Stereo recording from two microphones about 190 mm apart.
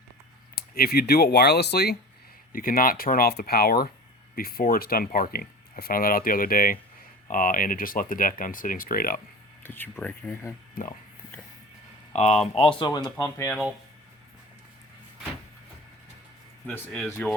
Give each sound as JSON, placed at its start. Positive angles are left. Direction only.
{"t": 0.5, "sound": "speech", "side_deg": 50}
{"t": 2.5, "sound": "speech", "side_deg": 50}
{"t": 9.6, "sound": "speech", "side_deg": 10}
{"t": 10.8, "sound": "speech", "side_deg": 50}
{"t": 12.1, "sound": "speech", "side_deg": 35}
{"t": 16.6, "sound": "speech", "side_deg": 10}